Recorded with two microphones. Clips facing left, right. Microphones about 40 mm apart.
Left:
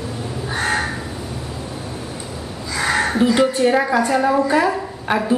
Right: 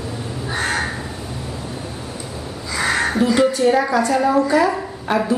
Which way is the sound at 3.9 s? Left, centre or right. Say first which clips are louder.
Even; left.